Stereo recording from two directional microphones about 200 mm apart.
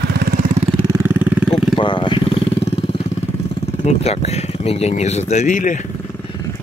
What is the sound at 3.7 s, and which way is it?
Speech, 35° left (ahead or behind).